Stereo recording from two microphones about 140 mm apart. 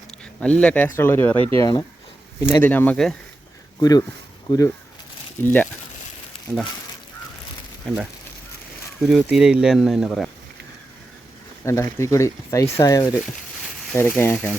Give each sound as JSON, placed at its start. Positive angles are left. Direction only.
{"t": 0.3, "sound": "speech", "side_deg": 10}
{"t": 3.8, "sound": "speech", "side_deg": 30}
{"t": 5.4, "sound": "speech", "side_deg": 15}
{"t": 9.0, "sound": "speech", "side_deg": -5}
{"t": 11.6, "sound": "speech", "side_deg": 20}